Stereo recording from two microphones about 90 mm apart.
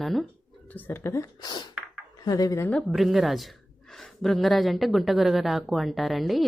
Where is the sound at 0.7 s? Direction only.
25° left (ahead or behind).